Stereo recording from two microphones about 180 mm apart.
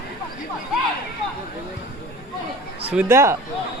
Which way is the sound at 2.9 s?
10° right (ahead or behind).